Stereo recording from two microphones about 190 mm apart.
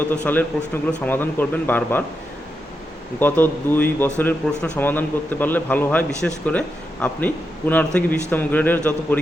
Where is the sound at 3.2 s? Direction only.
10° left (ahead or behind).